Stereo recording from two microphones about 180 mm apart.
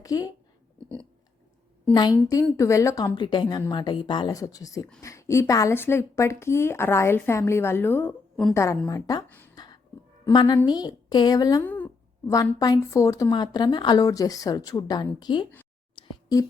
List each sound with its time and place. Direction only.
0.0 s speech: 20° left (ahead or behind)
1.9 s a woman's voice: 25° left (ahead or behind)
9.6 s a sound: 20° left (ahead or behind)
10.3 s speech: 25° left (ahead or behind)
11.6 s speech: 10° left (ahead or behind)
12.2 s speech: 20° left (ahead or behind)
16.0 s a sound: 20° left (ahead or behind)